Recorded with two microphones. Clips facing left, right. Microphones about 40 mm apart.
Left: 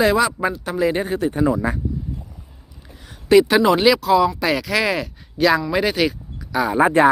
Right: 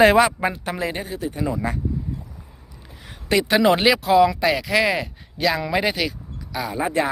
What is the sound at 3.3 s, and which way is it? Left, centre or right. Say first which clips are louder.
Speech: left 6 dB; centre.